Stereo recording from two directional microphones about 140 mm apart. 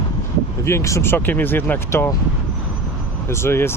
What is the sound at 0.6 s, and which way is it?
Speech, 20° left (ahead or behind).